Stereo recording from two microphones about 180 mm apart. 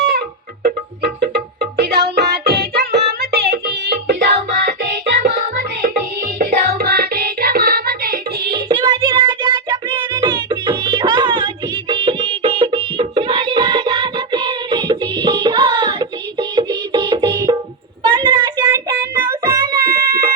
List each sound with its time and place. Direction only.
0.6 s music: 60° right (ahead or behind)
5.2 s music: 55° right (ahead or behind)
6.4 s music: 40° right (ahead or behind)
6.7 s music: 60° right (ahead or behind)
8.5 s music: 25° right (ahead or behind)
18.0 s a sound: 25° right (ahead or behind)
18.6 s child singing: 15° right (ahead or behind)
19.5 s music: 20° right (ahead or behind)
19.9 s cat: 55° right (ahead or behind)